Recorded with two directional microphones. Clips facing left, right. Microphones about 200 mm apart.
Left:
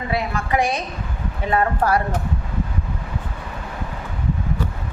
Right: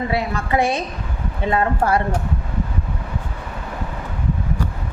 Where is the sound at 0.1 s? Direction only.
30° right (ahead or behind).